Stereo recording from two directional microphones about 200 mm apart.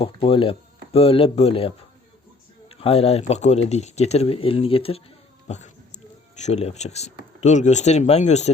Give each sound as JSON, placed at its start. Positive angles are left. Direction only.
{"t": 0.0, "sound": "speech", "side_deg": 25}
{"t": 5.5, "sound": "a sound", "side_deg": 35}
{"t": 6.3, "sound": "speech", "side_deg": 35}